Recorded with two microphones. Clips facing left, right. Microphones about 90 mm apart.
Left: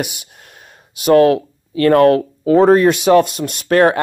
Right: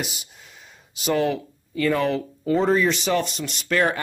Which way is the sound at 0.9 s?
60° left (ahead or behind).